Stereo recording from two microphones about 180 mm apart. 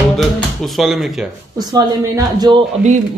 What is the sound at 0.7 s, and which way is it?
Speech, centre (ahead or behind).